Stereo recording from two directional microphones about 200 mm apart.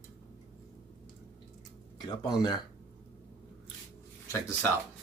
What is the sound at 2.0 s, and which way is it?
Speech, 20° left (ahead or behind).